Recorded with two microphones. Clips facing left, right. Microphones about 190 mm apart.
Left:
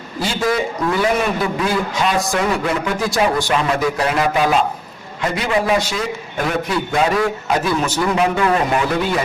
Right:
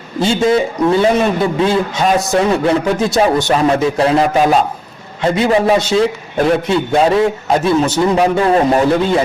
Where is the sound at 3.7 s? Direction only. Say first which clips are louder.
Right 6 dB; 25° right (ahead or behind).